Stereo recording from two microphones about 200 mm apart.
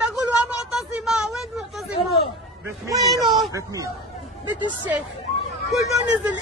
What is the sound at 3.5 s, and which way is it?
Speech, 15° right (ahead or behind).